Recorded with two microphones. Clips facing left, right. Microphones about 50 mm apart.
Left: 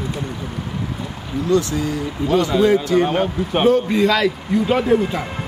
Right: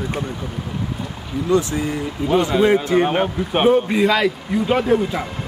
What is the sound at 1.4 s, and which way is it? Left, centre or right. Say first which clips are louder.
Speech: even; right.